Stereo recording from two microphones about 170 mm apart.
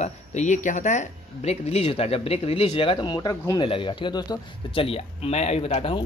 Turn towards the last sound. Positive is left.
turn(degrees=35)  # may be behind; listen again after turning